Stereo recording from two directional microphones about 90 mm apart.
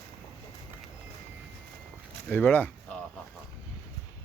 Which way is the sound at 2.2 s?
20° left (ahead or behind).